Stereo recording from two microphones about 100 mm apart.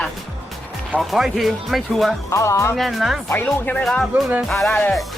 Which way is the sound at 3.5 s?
20° left (ahead or behind).